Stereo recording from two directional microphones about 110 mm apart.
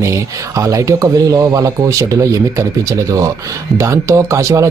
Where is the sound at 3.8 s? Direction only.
30° right (ahead or behind).